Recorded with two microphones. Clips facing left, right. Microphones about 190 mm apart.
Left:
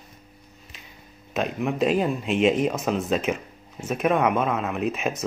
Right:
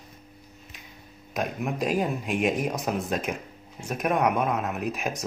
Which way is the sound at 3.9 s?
90° left.